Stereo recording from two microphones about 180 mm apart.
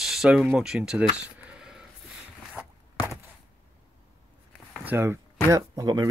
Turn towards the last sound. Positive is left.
turn(degrees=-20)  # may be behind; listen again after turning